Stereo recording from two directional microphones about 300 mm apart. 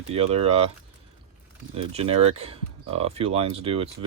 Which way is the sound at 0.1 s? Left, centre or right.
Centre.